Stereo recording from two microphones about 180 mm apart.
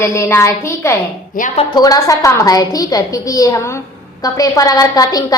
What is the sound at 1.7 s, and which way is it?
A woman's voice, 20° left (ahead or behind).